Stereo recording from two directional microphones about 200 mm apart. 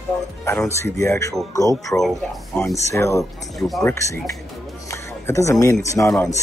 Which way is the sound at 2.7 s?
15° left (ahead or behind).